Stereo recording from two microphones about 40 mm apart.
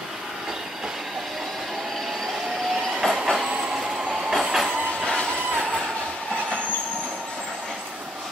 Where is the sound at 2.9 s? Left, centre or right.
Centre.